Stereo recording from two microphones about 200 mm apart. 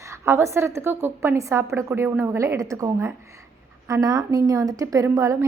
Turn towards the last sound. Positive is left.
turn(degrees=-15)  # may be behind; listen again after turning